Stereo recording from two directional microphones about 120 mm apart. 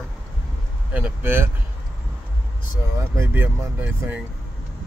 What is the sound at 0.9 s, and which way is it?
Speech, 15° right (ahead or behind).